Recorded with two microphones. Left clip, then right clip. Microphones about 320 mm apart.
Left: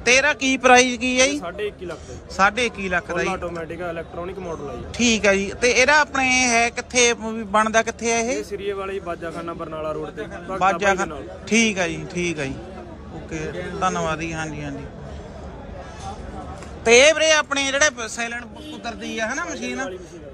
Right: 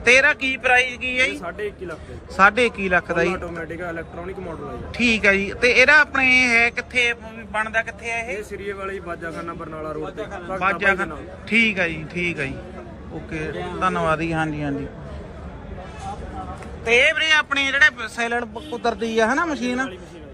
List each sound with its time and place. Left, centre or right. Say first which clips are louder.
0.0 s a man's voice: right 2 dB; centre
3.5 s speech: left 1 dB; left
4.9 s a man's voice: right 1 dB; centre
10.5 s a man's voice: left 1 dB; centre
17.0 s a man's voice: left 2 dB; centre